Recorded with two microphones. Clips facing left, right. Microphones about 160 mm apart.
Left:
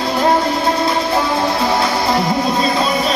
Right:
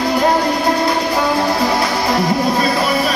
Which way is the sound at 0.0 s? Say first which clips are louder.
Even; 25° left (ahead or behind).